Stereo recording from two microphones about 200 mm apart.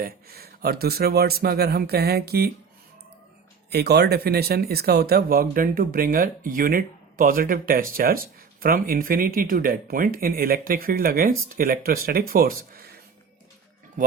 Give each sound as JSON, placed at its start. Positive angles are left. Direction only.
{"t": 0.0, "sound": "speech", "side_deg": -50}
{"t": 3.7, "sound": "speech", "side_deg": -55}